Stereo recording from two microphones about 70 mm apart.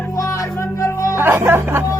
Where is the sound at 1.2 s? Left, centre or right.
Right.